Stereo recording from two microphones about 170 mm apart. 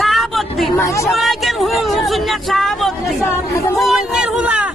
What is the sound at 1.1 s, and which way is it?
Speech, centre (ahead or behind).